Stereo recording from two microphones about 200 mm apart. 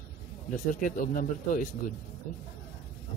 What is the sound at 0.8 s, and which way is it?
Speech, 45° left (ahead or behind).